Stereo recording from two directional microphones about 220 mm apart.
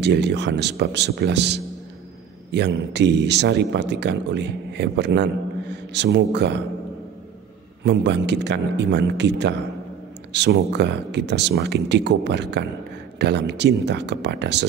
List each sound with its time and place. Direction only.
0.0 s speech: 50° right (ahead or behind)
7.8 s speech: 50° right (ahead or behind)